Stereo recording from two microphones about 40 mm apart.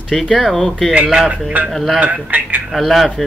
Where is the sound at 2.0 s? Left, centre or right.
Right.